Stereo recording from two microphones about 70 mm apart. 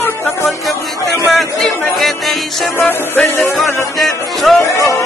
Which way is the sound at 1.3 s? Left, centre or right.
Centre.